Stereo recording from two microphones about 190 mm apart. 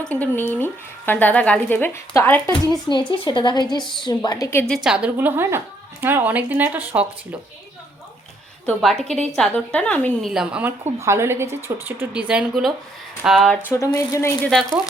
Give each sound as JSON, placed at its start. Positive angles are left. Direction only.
{"t": 0.0, "sound": "speech", "side_deg": 5}
{"t": 2.9, "sound": "a woman's voice", "side_deg": 25}
{"t": 4.7, "sound": "speech", "side_deg": -5}
{"t": 8.6, "sound": "a woman's voice", "side_deg": 0}
{"t": 10.3, "sound": "a woman's voice", "side_deg": -5}
{"t": 13.7, "sound": "speech", "side_deg": 15}